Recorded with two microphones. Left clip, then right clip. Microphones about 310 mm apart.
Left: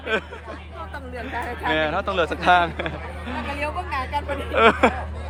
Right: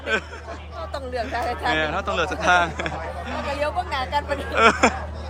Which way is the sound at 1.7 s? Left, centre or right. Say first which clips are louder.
Left 4 dB; centre.